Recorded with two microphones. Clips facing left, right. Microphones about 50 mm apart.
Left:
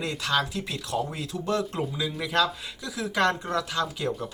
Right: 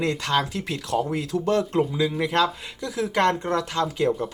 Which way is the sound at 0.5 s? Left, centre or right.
Right.